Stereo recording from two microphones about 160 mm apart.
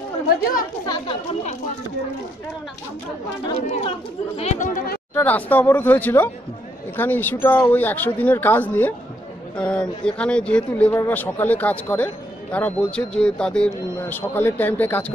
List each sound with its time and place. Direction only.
0.3 s speech: 60° left (ahead or behind)
0.8 s speech: 30° left (ahead or behind)
4.4 s speech: 45° left (ahead or behind)
5.1 s speech: 10° left (ahead or behind)